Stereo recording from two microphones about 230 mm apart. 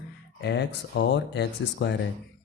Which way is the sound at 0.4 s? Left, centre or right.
Left.